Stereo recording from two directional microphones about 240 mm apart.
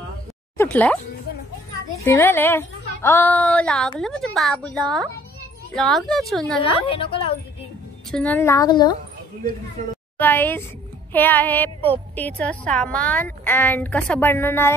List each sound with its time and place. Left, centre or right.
0.6 s speech: centre
2.0 s speech: centre
6.6 s a woman's voice: left
8.1 s speech: centre
10.1 s a woman's voice: centre